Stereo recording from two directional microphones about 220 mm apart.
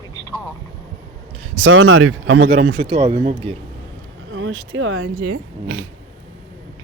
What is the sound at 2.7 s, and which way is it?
Speech, 20° right (ahead or behind).